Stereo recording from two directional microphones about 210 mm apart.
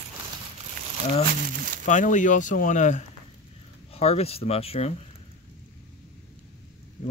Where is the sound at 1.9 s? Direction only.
35° left (ahead or behind).